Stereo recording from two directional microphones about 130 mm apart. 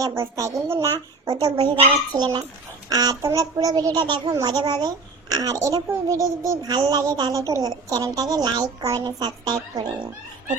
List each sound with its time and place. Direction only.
0.0 s a child's voice: 25° right (ahead or behind)
1.2 s a child's voice: 35° right (ahead or behind)